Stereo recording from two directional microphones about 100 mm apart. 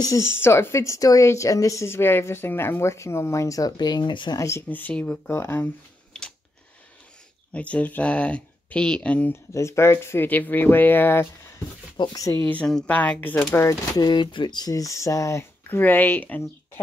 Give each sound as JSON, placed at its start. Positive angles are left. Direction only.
{"t": 0.0, "sound": "speech", "side_deg": 30}
{"t": 4.4, "sound": "speech", "side_deg": 30}
{"t": 4.6, "sound": "speech", "side_deg": 15}
{"t": 5.3, "sound": "speech", "side_deg": 25}
{"t": 6.1, "sound": "a sound", "side_deg": 10}
{"t": 7.5, "sound": "speech", "side_deg": 15}
{"t": 9.5, "sound": "speech", "side_deg": 30}
{"t": 12.0, "sound": "speech", "side_deg": 40}
{"t": 12.3, "sound": "speech", "side_deg": 20}
{"t": 13.9, "sound": "speech", "side_deg": 50}
{"t": 15.8, "sound": "speech", "side_deg": 20}